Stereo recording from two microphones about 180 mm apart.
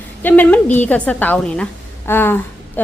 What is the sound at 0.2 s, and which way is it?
A woman's voice, 10° left (ahead or behind).